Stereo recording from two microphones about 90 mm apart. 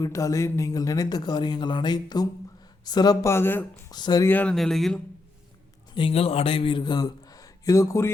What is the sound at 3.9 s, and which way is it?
Speech, 50° left (ahead or behind).